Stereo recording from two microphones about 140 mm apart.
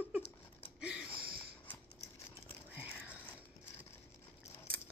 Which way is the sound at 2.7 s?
10° right (ahead or behind).